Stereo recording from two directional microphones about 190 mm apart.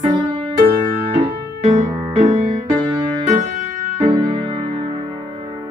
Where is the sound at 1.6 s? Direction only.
35° right (ahead or behind).